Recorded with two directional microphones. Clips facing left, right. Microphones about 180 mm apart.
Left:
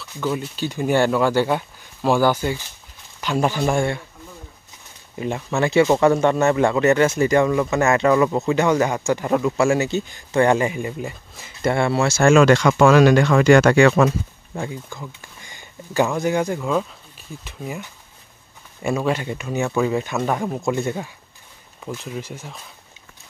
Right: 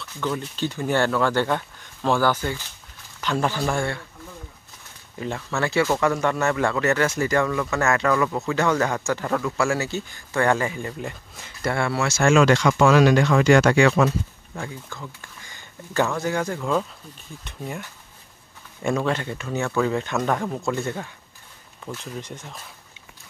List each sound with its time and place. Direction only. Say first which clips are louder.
0.0 s speech: left 3 dB; 10° left (ahead or behind)
5.2 s speech: left 4 dB; 15° left (ahead or behind)
11.6 s speech: left 5 dB; 25° left (ahead or behind)
12.2 s speech: left 3 dB; 50° left (ahead or behind)
14.5 s speech: left 6 dB; 20° left (ahead or behind)
16.5 s speech: left 2 dB; 5° left (ahead or behind)